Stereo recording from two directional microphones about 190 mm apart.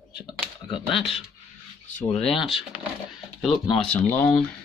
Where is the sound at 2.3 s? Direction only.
Centre (ahead or behind).